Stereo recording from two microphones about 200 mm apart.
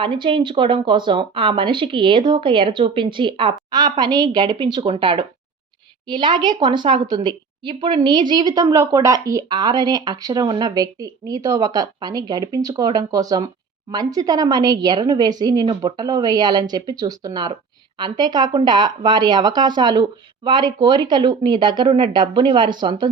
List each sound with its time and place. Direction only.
0.0 s a woman's voice: 25° right (ahead or behind)